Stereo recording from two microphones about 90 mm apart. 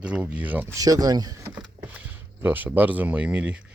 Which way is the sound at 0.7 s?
40° right (ahead or behind).